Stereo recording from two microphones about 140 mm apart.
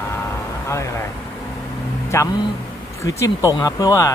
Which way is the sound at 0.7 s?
20° left (ahead or behind).